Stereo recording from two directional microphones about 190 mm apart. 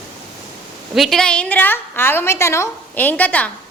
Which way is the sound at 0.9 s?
Centre (ahead or behind).